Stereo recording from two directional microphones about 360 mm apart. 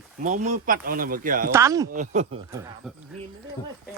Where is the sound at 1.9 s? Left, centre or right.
Centre.